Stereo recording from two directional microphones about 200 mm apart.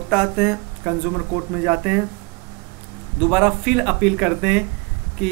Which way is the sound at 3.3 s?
5° right (ahead or behind).